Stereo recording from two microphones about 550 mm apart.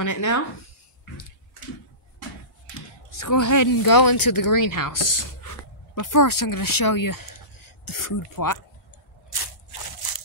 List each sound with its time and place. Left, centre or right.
0.0 s speech: left
3.2 s speech: left
9.3 s crushing: left